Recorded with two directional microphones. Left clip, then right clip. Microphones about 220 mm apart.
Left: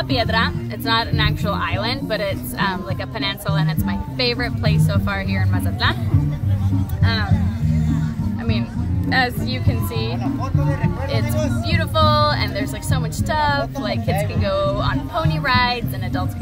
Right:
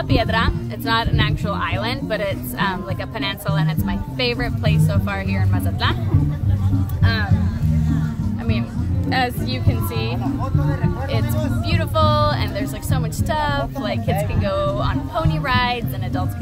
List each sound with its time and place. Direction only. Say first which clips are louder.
0.1 s a woman's voice: even; 5° left (ahead or behind)
7.0 s music: even; centre (ahead or behind)
9.1 s speech: left 2 dB; 5° left (ahead or behind)
10.6 s speech: left 1 dB; 40° left (ahead or behind)
11.7 s a woman's voice: left 1 dB; centre (ahead or behind)